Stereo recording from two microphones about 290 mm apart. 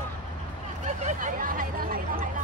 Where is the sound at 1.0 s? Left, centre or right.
Right.